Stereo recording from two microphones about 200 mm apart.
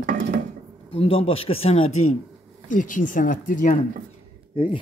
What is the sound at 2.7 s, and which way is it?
Speech, 40° left (ahead or behind).